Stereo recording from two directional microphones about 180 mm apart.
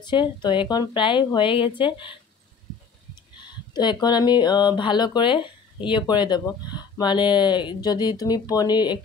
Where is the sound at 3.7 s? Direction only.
25° left (ahead or behind).